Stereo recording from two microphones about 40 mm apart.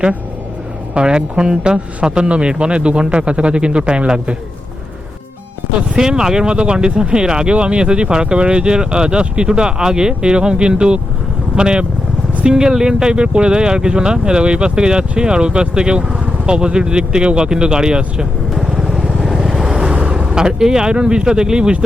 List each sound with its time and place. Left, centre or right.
0.9 s speech: right
6.0 s speech: centre
18.5 s vehicle: centre
19.9 s speech: right